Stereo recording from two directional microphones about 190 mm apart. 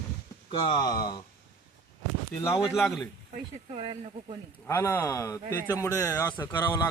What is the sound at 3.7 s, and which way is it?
Speech, 30° right (ahead or behind).